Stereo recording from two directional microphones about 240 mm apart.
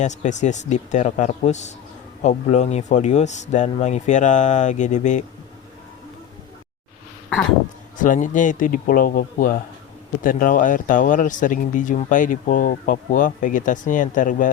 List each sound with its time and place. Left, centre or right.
0.0 s a man's voice: left
7.9 s speech: left